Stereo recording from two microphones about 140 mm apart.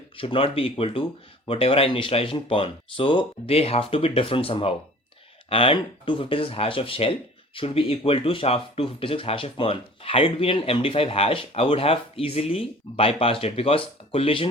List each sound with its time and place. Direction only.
0.2 s speech: 40° left (ahead or behind)